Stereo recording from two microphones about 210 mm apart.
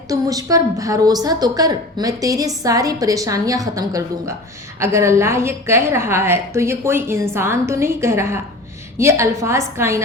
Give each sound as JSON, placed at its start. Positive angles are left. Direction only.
{"t": 0.1, "sound": "a woman's voice", "side_deg": -15}